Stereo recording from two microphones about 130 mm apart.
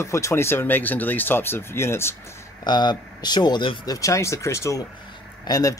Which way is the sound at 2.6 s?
35° left (ahead or behind).